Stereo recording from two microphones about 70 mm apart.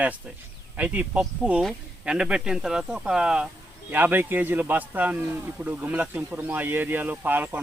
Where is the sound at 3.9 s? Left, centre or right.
Right.